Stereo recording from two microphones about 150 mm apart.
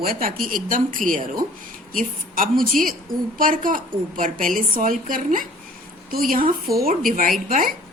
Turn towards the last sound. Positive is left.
turn(degrees=-65)  # may be behind; listen again after turning